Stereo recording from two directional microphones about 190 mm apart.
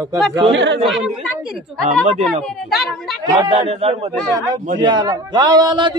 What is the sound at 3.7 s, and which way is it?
Speech, 35° right (ahead or behind).